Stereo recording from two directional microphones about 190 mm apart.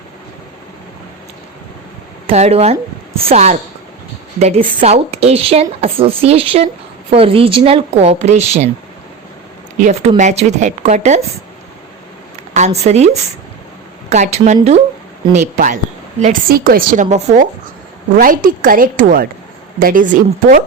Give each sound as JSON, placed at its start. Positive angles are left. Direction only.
{"t": 2.2, "sound": "speech", "side_deg": -35}
{"t": 9.7, "sound": "a woman's voice", "side_deg": -45}
{"t": 12.5, "sound": "speech", "side_deg": -35}
{"t": 14.1, "sound": "a woman's voice", "side_deg": -35}